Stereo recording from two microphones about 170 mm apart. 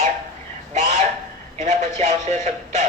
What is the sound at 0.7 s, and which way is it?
Synthetic singing, 45° right (ahead or behind).